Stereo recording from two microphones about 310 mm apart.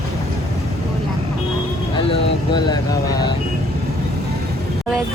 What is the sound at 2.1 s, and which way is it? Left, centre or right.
Vehicle, centre.